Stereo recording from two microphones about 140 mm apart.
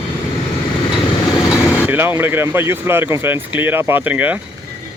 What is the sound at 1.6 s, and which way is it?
Vehicle, 20° left (ahead or behind).